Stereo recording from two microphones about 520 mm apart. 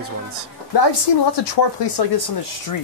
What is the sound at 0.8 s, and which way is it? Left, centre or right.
A woman's voice, left.